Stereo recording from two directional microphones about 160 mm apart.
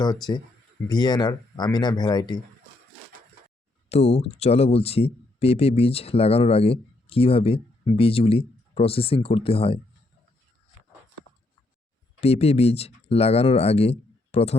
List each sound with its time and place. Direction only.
0.9 s speech: 25° left (ahead or behind)
3.8 s speech: 40° left (ahead or behind)
12.2 s speech: 40° left (ahead or behind)